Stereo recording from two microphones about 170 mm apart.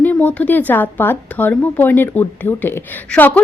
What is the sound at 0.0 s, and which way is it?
A woman's voice, 10° left (ahead or behind).